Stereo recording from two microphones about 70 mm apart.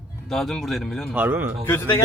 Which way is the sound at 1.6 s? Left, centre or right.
Left.